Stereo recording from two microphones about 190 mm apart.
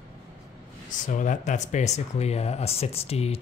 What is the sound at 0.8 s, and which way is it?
Speech, 40° left (ahead or behind).